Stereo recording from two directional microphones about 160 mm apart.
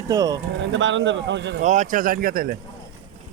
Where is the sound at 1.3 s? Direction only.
90° right.